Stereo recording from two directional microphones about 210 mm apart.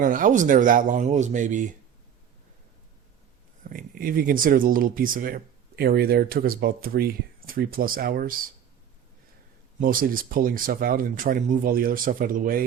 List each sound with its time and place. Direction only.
0.0 s speech: 40° right (ahead or behind)
3.6 s speech: 40° right (ahead or behind)
9.8 s speech: 40° right (ahead or behind)